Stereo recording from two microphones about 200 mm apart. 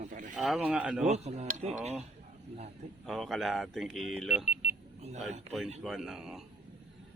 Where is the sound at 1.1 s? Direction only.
35° right (ahead or behind).